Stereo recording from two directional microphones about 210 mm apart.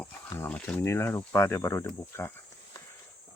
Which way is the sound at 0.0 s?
5° left (ahead or behind).